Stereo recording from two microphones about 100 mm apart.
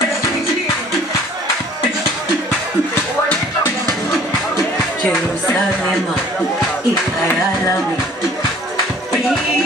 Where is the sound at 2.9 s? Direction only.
25° left (ahead or behind).